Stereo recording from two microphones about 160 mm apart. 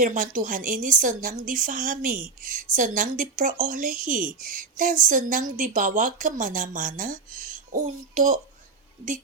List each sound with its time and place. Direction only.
0.0 s a woman's voice: 55° right (ahead or behind)